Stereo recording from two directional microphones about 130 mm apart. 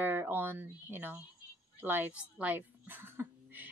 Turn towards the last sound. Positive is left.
turn(degrees=-15)  # may be behind; listen again after turning